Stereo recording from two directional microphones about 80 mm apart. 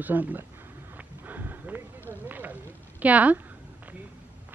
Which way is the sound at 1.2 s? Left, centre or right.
Right.